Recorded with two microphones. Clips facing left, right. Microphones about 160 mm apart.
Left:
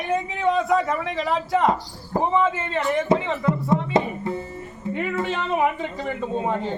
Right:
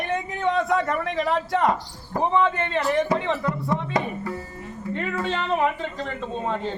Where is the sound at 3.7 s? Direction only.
25° left (ahead or behind).